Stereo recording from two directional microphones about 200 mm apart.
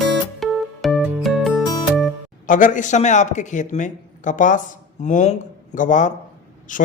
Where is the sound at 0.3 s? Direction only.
Centre (ahead or behind).